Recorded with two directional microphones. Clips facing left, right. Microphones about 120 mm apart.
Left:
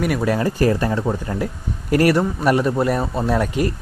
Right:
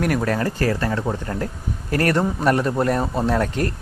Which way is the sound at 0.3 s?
15° left (ahead or behind).